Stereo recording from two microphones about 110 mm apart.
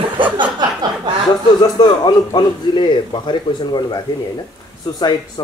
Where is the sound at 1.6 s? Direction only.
40° left (ahead or behind).